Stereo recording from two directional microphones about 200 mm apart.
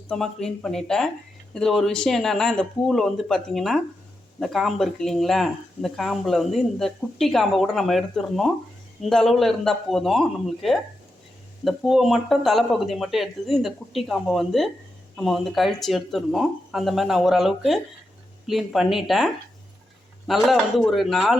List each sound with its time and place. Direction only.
0.1 s speech: centre (ahead or behind)